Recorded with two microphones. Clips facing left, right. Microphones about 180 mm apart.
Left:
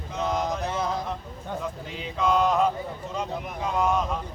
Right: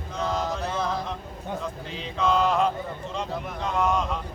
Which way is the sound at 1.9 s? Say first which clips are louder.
Even; 5° left (ahead or behind).